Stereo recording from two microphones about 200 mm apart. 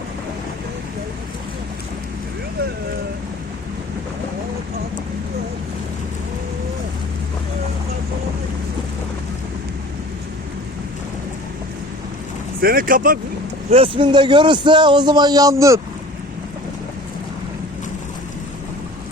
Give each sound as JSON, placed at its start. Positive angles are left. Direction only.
{"t": 12.6, "sound": "speech", "side_deg": -45}
{"t": 13.7, "sound": "a man's voice", "side_deg": -30}